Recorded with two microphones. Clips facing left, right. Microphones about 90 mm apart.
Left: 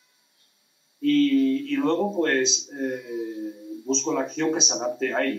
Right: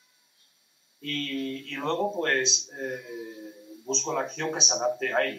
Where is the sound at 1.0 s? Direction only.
Centre (ahead or behind).